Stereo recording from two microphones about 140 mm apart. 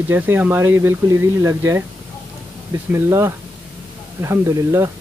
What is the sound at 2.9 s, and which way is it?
Speech, 20° right (ahead or behind).